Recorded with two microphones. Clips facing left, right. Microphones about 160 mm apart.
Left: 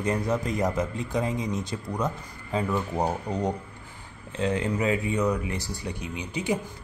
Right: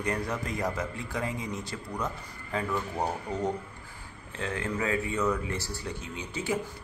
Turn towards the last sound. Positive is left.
turn(degrees=15)  # may be behind; listen again after turning